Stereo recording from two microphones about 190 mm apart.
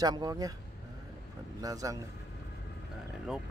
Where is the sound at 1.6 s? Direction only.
20° right (ahead or behind).